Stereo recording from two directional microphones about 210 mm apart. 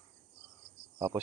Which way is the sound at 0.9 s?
10° right (ahead or behind).